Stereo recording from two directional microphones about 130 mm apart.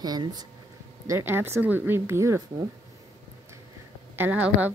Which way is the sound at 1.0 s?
20° right (ahead or behind).